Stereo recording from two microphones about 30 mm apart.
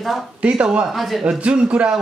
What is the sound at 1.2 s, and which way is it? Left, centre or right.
Speech, right.